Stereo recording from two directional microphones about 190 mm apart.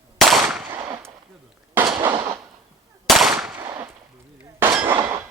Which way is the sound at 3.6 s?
15° right (ahead or behind).